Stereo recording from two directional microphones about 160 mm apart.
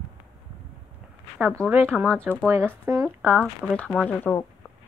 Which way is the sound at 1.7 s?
10° right (ahead or behind).